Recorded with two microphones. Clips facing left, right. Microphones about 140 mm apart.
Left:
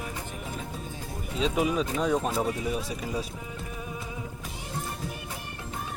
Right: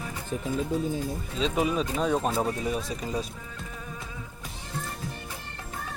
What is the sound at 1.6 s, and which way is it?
Speech, 10° left (ahead or behind).